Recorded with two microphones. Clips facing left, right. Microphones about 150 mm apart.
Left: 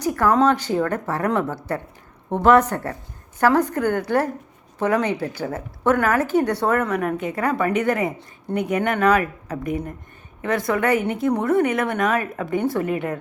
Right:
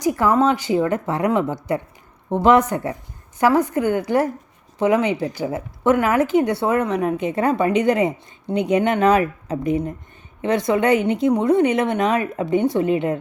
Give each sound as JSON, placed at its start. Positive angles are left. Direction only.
{"t": 0.0, "sound": "speech", "side_deg": -15}